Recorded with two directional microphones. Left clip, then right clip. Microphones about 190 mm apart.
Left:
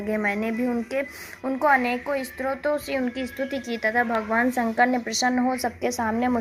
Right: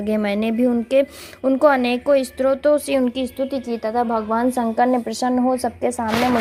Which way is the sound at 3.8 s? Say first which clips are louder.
Right 1 dB; 5° right (ahead or behind).